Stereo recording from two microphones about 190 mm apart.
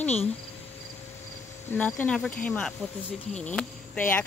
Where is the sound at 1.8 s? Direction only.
10° left (ahead or behind).